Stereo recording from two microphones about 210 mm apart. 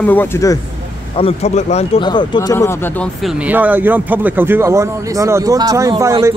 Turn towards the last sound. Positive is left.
turn(degrees=-15)  # may be behind; listen again after turning